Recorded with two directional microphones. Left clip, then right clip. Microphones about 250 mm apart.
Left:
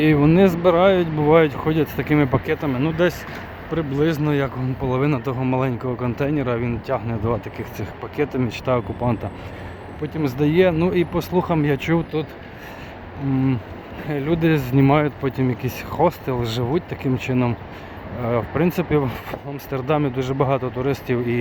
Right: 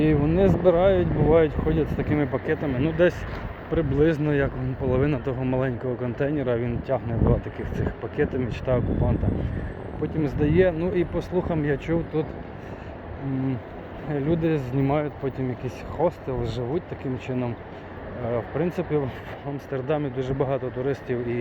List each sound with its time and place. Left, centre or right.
0.0 s speech: left
10.0 s speech: centre
14.1 s speech: centre